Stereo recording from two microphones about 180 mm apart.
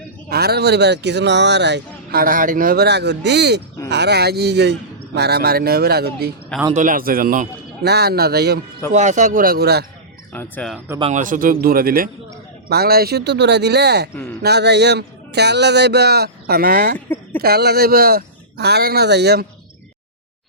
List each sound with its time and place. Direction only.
0.3 s speech: 60° right (ahead or behind)
2.2 s speech: 50° right (ahead or behind)
6.7 s speech: 50° right (ahead or behind)
8.9 s a man's voice: 40° right (ahead or behind); by 9.8 s 65° right (ahead or behind)
10.3 s speech: 10° left (ahead or behind)
11.1 s a man's voice: 45° right (ahead or behind); by 19.5 s 65° right (ahead or behind)